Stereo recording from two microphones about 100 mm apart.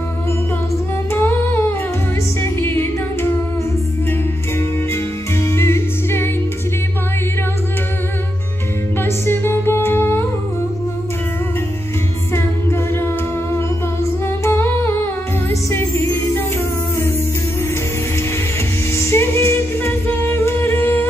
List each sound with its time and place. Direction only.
1.1 s humming: 20° left (ahead or behind)
2.6 s music: 20° left (ahead or behind)
5.4 s music: 25° left (ahead or behind)
9.0 s humming: 25° left (ahead or behind)
12.4 s a capella: 25° left (ahead or behind)
14.4 s humming: 20° left (ahead or behind)
15.7 s music: 25° left (ahead or behind)
18.9 s music: 25° left (ahead or behind)